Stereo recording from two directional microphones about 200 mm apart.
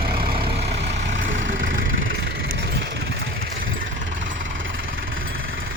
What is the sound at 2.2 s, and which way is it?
Vehicle, 55° right (ahead or behind).